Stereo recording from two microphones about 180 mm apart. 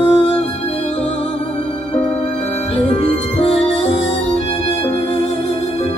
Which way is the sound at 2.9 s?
35° left (ahead or behind).